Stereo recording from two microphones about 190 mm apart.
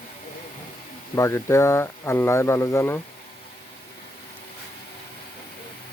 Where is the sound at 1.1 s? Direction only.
15° left (ahead or behind).